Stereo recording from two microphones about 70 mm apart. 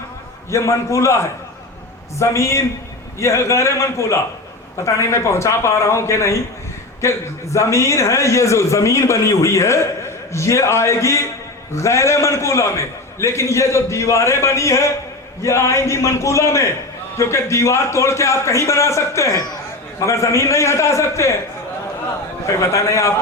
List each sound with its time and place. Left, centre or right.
0.5 s a man's voice: left
22.4 s a man's voice: left